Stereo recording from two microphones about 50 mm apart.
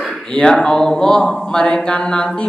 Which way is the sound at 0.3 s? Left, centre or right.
Centre.